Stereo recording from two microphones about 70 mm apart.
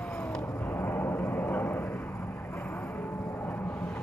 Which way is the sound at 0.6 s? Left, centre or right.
Left.